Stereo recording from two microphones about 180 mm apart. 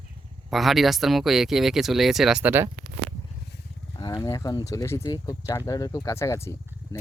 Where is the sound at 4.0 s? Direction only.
20° left (ahead or behind).